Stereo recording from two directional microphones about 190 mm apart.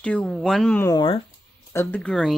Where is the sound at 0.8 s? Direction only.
20° left (ahead or behind).